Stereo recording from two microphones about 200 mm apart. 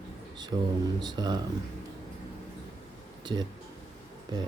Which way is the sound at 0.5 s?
25° right (ahead or behind).